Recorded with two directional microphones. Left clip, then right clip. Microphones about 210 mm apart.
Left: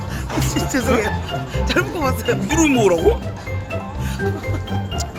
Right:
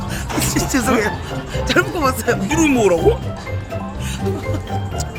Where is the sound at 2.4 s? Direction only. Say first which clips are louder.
Even; 10° left (ahead or behind).